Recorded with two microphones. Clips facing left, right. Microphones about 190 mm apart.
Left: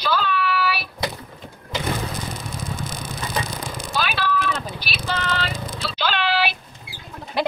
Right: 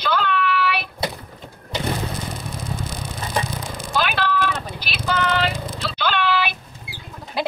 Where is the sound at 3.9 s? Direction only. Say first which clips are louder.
Right 2 dB; 50° right (ahead or behind).